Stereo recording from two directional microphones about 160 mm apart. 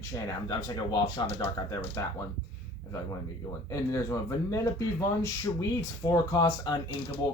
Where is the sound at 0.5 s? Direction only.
30° left (ahead or behind).